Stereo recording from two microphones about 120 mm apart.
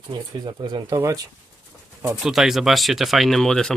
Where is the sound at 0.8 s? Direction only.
30° right (ahead or behind).